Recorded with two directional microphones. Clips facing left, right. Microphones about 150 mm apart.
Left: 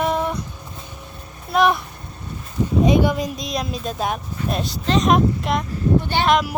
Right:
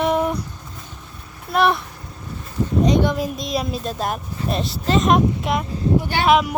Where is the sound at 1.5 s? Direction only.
Centre (ahead or behind).